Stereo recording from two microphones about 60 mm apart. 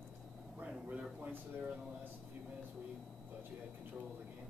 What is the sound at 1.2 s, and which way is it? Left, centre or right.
Speech, right.